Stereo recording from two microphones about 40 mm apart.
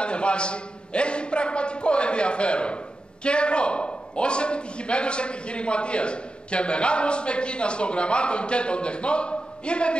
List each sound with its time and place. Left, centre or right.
0.0 s a man's voice: left